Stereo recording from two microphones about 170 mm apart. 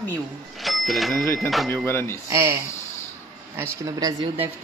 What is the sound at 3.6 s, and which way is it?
Speech, 20° right (ahead or behind).